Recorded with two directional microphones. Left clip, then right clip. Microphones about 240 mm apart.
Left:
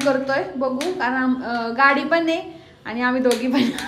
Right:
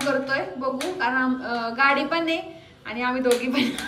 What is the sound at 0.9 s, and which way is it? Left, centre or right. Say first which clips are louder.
A woman's voice: left 2 dB; centre.